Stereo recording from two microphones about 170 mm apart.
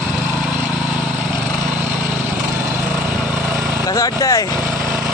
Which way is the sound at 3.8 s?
20° left (ahead or behind).